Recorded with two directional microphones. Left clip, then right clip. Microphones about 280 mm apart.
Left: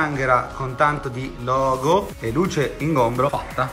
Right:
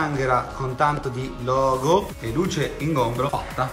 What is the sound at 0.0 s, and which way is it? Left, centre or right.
Speech, centre.